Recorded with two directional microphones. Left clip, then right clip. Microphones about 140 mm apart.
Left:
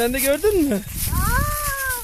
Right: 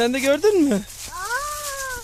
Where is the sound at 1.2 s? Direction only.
20° right (ahead or behind).